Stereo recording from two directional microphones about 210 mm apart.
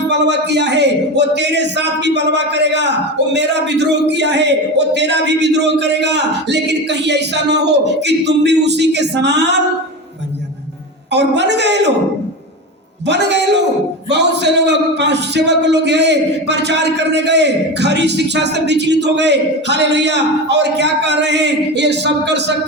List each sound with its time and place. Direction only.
0.1 s a man's voice: 55° right (ahead or behind)
11.1 s a man's voice: 55° right (ahead or behind)
13.1 s a man's voice: 55° right (ahead or behind)